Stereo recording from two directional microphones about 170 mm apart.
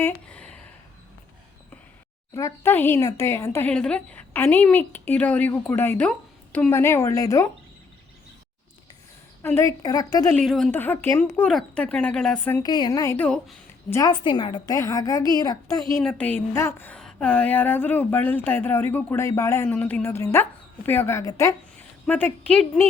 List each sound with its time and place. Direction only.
0.0 s a sound: 10° left (ahead or behind)
2.3 s a woman's voice: 15° left (ahead or behind)
9.4 s a woman's voice: 15° left (ahead or behind)
10.3 s a woman's voice: centre (ahead or behind)
12.6 s a woman's voice: 25° left (ahead or behind); by 13.6 s 5° left (ahead or behind)
13.9 s a woman's voice: 25° left (ahead or behind)
16.0 s a woman's voice: 5° left (ahead or behind)
22.0 s a woman's voice: 10° left (ahead or behind)